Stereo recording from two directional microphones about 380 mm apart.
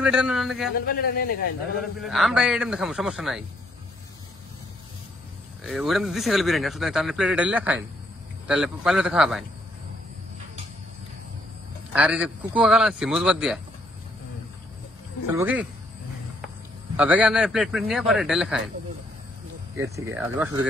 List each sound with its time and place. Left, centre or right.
0.0 s speech: centre
0.8 s a man's voice: left
1.8 s speech: centre
5.6 s speech: centre
11.9 s speech: centre
15.3 s speech: centre
16.9 s speech: centre
19.8 s speech: centre